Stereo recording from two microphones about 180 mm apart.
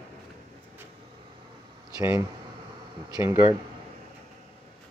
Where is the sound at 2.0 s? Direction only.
15° right (ahead or behind).